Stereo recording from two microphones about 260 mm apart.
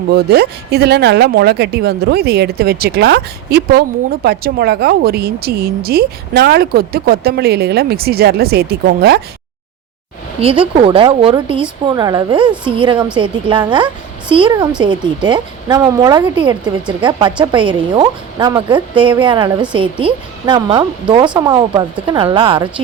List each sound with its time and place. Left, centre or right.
0.1 s speech: right
10.4 s a woman's voice: right